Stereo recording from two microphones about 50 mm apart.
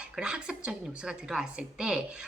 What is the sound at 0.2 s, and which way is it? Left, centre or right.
A woman's voice, centre.